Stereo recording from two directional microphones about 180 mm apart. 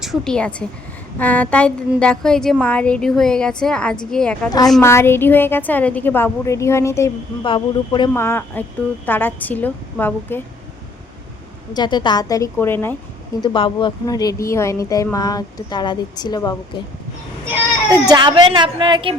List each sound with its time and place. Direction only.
0.0 s a woman's voice: centre (ahead or behind)
4.4 s a woman's voice: 20° left (ahead or behind)
7.4 s speech: 25° left (ahead or behind)
8.1 s a woman's voice: 15° left (ahead or behind)
11.7 s speech: 25° left (ahead or behind)
13.4 s speech: 25° left (ahead or behind)
18.1 s a woman's voice: 25° right (ahead or behind)